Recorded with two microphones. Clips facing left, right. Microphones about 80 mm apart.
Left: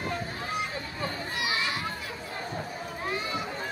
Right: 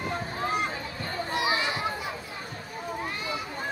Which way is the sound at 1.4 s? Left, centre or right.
Right.